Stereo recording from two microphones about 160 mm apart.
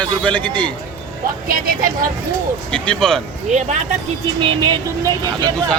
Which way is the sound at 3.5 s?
50° right (ahead or behind).